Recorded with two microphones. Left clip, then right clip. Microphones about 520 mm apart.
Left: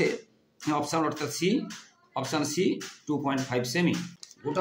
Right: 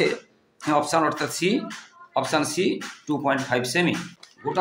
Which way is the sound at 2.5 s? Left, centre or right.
Left.